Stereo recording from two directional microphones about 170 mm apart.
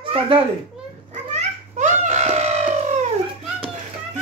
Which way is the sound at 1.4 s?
45° right (ahead or behind).